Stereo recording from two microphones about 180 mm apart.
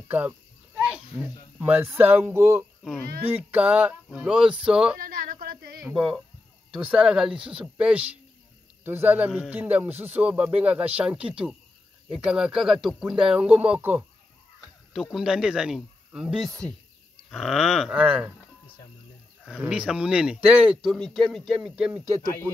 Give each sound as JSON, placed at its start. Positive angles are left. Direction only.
{"t": 0.7, "sound": "speech", "side_deg": -5}
{"t": 5.0, "sound": "a sound", "side_deg": -55}
{"t": 5.9, "sound": "speech", "side_deg": 0}
{"t": 19.4, "sound": "speech", "side_deg": -5}